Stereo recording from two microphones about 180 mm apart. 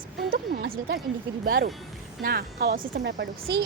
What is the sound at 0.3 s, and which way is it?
A woman's voice, 55° right (ahead or behind).